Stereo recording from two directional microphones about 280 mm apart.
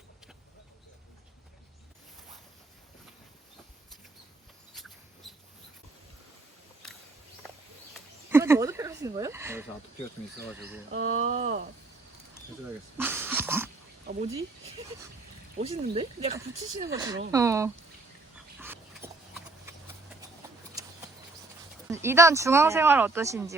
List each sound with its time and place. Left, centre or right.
5.2 s mouse: centre
8.3 s speech: centre
10.9 s speech: right
13.0 s a sound: centre
14.1 s speech: right
18.6 s dog: centre
21.8 s speech: centre